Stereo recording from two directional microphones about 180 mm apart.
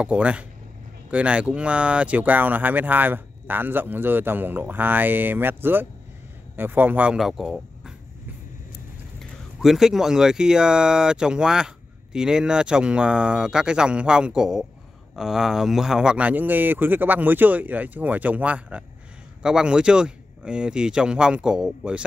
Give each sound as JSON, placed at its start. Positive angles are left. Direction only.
{"t": 0.0, "sound": "speech", "side_deg": -5}
{"t": 9.2, "sound": "speech", "side_deg": 0}